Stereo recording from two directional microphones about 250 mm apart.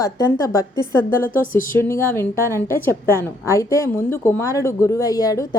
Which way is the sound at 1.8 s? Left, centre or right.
Centre.